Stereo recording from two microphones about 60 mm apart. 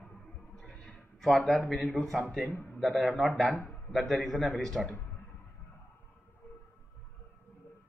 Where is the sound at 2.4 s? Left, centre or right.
Left.